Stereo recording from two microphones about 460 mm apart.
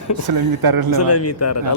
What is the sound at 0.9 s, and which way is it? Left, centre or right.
Speech, left.